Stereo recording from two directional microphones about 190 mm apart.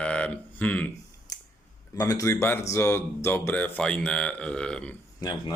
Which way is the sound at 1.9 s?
20° left (ahead or behind).